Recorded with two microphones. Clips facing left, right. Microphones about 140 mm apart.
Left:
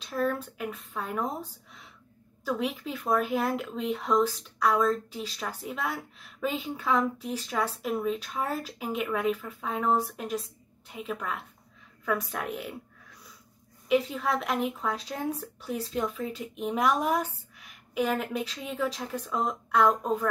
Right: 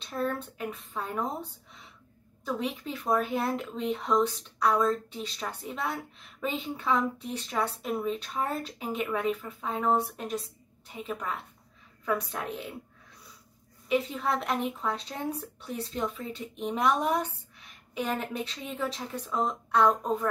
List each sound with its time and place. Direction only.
0.4 s speech: centre (ahead or behind)
2.8 s a woman's voice: centre (ahead or behind)
13.8 s speech: centre (ahead or behind)